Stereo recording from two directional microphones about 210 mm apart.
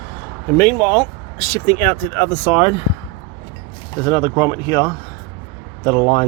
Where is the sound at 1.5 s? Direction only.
10° left (ahead or behind).